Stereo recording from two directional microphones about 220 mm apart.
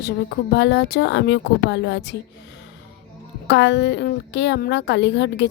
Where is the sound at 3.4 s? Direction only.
55° left (ahead or behind).